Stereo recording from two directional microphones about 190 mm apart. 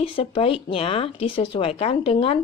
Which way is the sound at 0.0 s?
25° left (ahead or behind).